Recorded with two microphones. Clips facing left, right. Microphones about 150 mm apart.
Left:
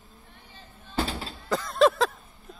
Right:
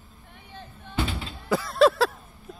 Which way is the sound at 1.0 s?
35° left (ahead or behind).